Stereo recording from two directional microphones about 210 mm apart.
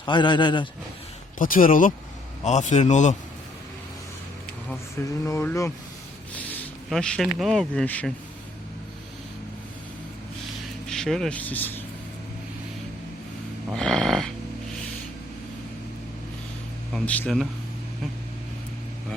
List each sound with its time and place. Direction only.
0.0 s a man's voice: 20° left (ahead or behind)
1.4 s a man's voice: 40° left (ahead or behind)
5.2 s speech: 15° left (ahead or behind)
10.8 s speech: centre (ahead or behind)
13.7 s dog: 5° left (ahead or behind)
16.9 s a man's voice: 5° left (ahead or behind)